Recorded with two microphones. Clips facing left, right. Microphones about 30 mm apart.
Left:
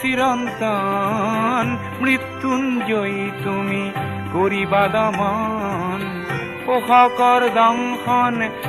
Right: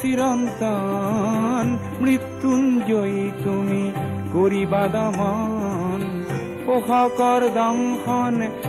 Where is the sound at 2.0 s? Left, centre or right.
Left.